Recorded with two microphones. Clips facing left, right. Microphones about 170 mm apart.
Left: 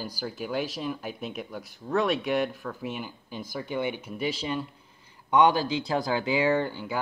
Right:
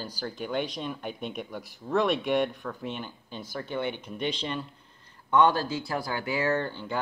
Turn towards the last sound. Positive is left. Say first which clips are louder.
# left 3 dB
turn(degrees=10)  # may be behind; listen again after turning